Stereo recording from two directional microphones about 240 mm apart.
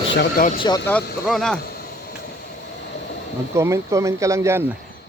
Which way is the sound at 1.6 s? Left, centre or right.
Left.